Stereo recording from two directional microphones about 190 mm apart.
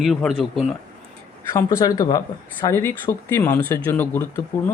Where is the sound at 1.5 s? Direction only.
20° left (ahead or behind).